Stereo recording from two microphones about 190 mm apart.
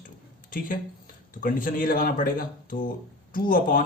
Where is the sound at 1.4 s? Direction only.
45° left (ahead or behind).